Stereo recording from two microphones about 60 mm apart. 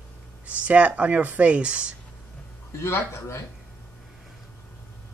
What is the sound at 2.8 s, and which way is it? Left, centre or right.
Speech, left.